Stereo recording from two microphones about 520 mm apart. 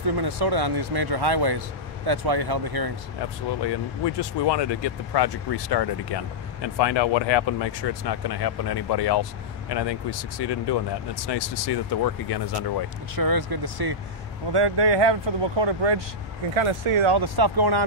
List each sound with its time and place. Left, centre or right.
0.1 s speech: right
3.6 s speech: left
13.1 s speech: right
16.5 s speech: right
17.1 s speech: right